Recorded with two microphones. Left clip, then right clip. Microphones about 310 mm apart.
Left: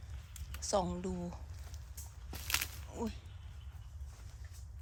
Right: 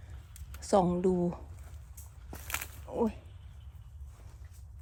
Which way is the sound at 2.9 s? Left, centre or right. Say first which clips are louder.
Right 11 dB; centre.